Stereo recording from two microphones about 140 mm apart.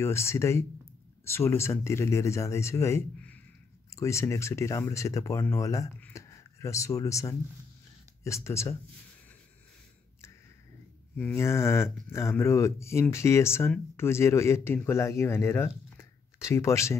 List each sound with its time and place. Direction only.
0.0 s speech: 20° left (ahead or behind)
11.1 s speech: 15° left (ahead or behind)